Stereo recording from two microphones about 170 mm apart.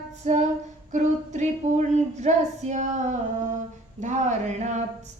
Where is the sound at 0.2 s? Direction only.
45° right (ahead or behind).